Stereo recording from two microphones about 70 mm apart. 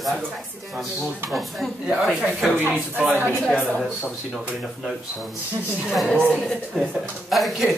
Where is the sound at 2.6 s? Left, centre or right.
Right.